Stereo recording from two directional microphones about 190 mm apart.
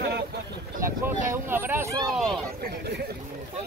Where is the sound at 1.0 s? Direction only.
10° right (ahead or behind).